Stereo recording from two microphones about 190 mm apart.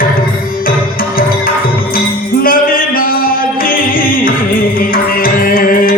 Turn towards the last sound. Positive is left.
turn(degrees=50)  # may be behind; listen again after turning